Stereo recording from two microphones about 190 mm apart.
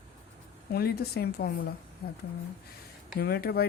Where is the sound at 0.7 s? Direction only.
55° left (ahead or behind).